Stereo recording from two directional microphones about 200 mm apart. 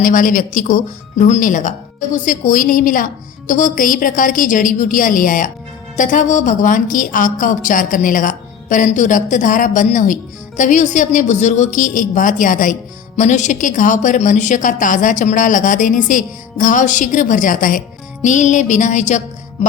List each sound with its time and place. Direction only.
0.0 s a woman's voice: 40° left (ahead or behind)